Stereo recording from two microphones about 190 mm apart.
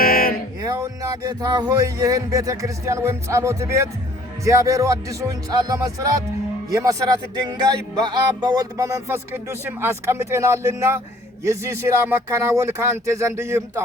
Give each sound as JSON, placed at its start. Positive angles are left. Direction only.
{"t": 0.0, "sound": "music", "side_deg": 50}
{"t": 0.6, "sound": "speech", "side_deg": -20}